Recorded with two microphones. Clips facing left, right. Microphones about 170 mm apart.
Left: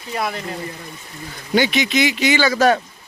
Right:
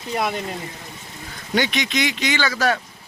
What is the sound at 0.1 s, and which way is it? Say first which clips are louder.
Speech: right 1 dB; 20° right (ahead or behind).